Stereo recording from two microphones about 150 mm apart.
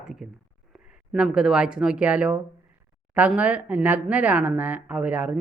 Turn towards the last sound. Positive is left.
turn(degrees=-10)  # may be behind; listen again after turning